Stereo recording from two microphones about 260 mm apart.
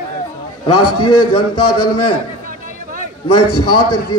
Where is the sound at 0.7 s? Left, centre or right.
Left.